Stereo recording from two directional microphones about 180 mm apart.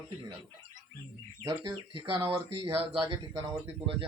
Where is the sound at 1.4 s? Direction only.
25° right (ahead or behind).